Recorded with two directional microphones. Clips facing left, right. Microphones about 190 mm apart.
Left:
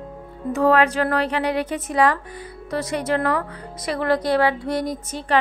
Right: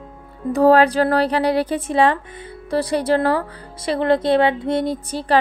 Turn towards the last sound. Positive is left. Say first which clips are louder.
# right 4 dB
turn(degrees=-35)  # may be behind; listen again after turning